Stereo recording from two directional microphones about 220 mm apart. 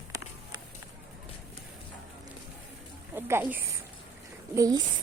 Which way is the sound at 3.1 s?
10° right (ahead or behind).